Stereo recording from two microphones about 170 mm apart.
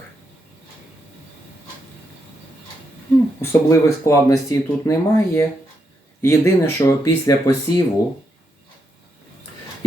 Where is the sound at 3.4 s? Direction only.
15° left (ahead or behind).